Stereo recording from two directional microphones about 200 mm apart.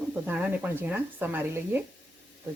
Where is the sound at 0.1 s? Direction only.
10° right (ahead or behind).